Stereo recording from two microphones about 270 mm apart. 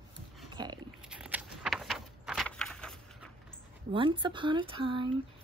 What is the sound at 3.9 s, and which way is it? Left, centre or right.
Speech, centre.